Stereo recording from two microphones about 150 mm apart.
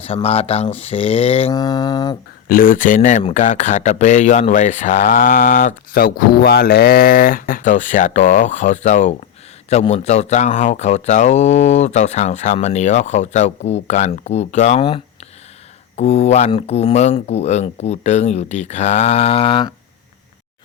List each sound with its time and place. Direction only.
0.0 s speech: 40° left (ahead or behind)
1.5 s mantra: 25° left (ahead or behind)
2.5 s speech: 70° left (ahead or behind); by 19.7 s 35° left (ahead or behind)